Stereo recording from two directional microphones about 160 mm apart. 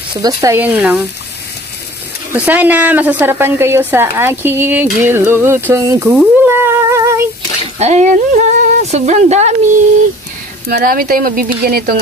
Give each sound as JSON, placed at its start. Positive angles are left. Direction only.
{"t": 0.1, "sound": "a woman's voice", "side_deg": -20}
{"t": 2.3, "sound": "a woman's voice", "side_deg": -10}
{"t": 6.0, "sound": "humming", "side_deg": -10}
{"t": 7.8, "sound": "speech", "side_deg": -45}
{"t": 10.7, "sound": "speech", "side_deg": -65}